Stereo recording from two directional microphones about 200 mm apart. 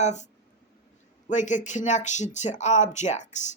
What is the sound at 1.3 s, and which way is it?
A woman's voice, 35° left (ahead or behind).